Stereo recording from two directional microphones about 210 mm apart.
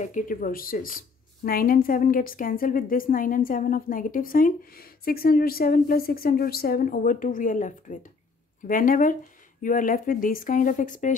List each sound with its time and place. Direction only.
0.0 s speech: 40° left (ahead or behind)